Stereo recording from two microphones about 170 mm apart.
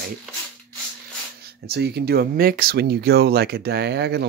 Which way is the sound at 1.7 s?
70° right (ahead or behind).